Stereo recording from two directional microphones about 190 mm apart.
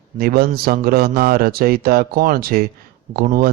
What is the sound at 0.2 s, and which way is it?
A man's voice, 55° right (ahead or behind).